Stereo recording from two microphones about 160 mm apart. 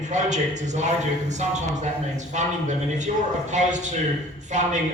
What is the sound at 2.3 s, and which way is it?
Speech, 50° right (ahead or behind).